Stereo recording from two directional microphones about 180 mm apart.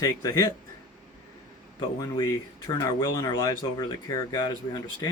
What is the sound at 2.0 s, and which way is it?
Speech, 20° left (ahead or behind).